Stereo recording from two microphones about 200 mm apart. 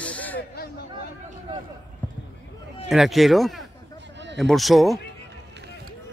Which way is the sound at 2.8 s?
Centre (ahead or behind).